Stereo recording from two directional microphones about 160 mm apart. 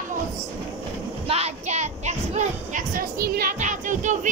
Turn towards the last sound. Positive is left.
turn(degrees=-50)  # may be behind; listen again after turning